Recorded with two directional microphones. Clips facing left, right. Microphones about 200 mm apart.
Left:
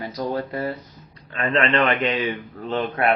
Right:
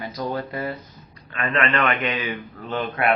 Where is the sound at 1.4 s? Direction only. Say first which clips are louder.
Left 3 dB; 30° left (ahead or behind).